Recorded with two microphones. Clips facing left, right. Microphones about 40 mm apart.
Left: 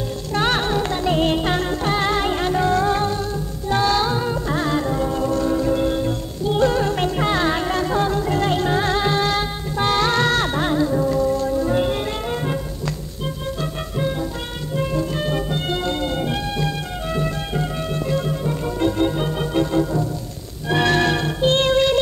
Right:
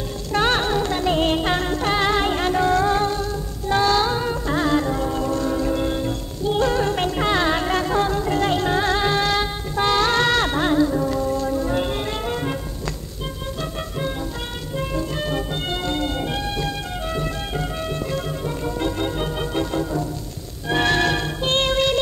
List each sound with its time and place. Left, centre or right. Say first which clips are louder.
0.4 s music: even; centre
10.1 s music: even; right
10.4 s music: right 1 dB; centre
13.6 s music: left 1 dB; centre
21.5 s music: left 3 dB; right